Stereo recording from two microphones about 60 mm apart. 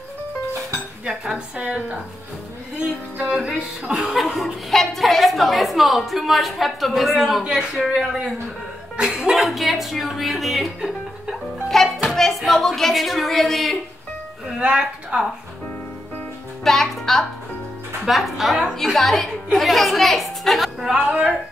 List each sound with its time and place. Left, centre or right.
1.0 s a woman's voice: centre
2.7 s music: centre
3.3 s a woman's voice: centre
14.6 s a woman's voice: centre
16.6 s a child's voice: centre
20.8 s a woman's voice: centre